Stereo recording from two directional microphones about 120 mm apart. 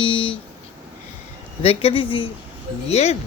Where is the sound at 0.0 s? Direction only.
45° left (ahead or behind).